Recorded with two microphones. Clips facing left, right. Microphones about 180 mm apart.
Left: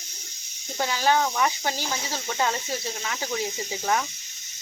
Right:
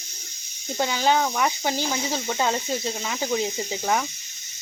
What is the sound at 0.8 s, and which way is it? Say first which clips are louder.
Speech: right 1 dB; 20° right (ahead or behind).